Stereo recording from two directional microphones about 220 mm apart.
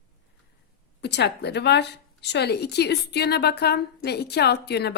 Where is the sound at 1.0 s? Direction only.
50° left (ahead or behind).